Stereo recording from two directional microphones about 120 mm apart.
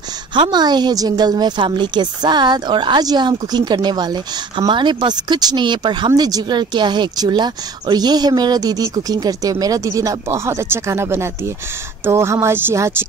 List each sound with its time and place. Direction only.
0.3 s a woman's voice: 40° right (ahead or behind); by 12.9 s 20° right (ahead or behind)